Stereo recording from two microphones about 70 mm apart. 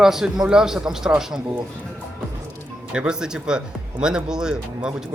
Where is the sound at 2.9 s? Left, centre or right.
Centre.